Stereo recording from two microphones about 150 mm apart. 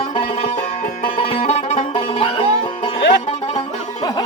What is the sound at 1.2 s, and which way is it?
Music, 40° left (ahead or behind).